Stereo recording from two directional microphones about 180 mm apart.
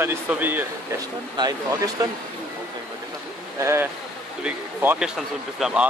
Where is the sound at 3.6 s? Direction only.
15° right (ahead or behind).